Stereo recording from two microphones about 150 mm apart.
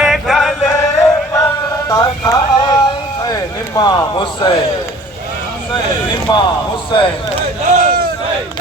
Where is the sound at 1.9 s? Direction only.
25° left (ahead or behind).